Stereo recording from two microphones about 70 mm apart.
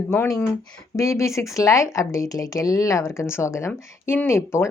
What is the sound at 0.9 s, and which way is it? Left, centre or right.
Speech, left.